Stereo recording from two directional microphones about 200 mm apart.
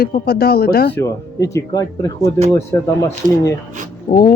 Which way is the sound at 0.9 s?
15° left (ahead or behind).